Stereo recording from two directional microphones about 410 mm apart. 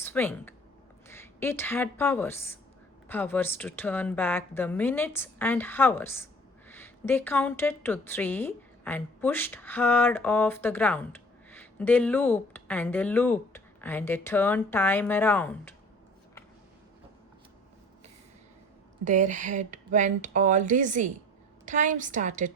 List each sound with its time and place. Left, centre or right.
0.0 s a woman's voice: centre
19.0 s speech: centre